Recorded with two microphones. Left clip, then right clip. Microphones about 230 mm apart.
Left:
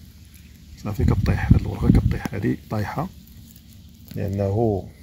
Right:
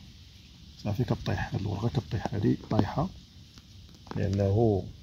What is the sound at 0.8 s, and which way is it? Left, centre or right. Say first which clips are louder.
Speech: left 6 dB; centre.